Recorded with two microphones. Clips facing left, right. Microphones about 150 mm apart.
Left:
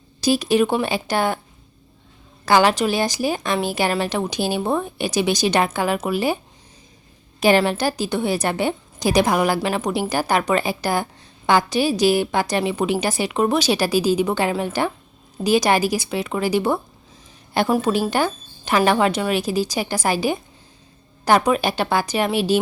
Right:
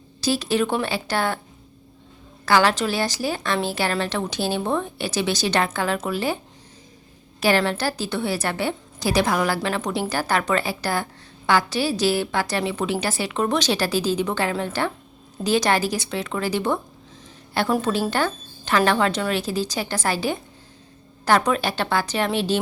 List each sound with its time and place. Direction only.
0.2 s a woman's voice: 15° left (ahead or behind)
2.5 s a woman's voice: 15° left (ahead or behind)